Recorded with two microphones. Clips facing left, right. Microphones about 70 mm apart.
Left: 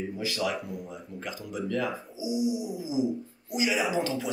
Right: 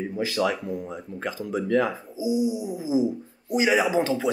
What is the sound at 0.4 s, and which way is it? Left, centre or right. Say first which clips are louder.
Speech: right 7 dB; right.